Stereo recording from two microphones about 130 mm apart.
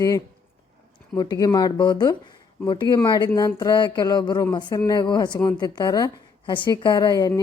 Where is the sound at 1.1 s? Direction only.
30° left (ahead or behind).